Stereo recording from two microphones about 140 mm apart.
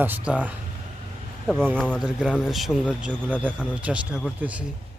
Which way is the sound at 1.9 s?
5° right (ahead or behind).